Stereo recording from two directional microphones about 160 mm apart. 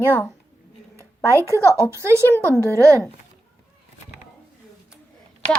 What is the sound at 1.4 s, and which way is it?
A woman's voice, 20° right (ahead or behind).